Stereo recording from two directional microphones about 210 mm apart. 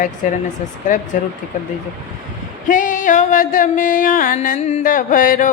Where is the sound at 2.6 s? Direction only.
40° left (ahead or behind).